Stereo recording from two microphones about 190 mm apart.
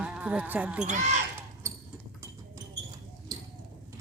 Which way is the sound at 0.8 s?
40° right (ahead or behind).